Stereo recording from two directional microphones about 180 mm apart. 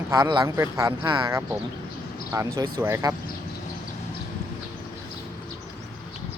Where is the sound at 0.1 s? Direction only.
20° right (ahead or behind).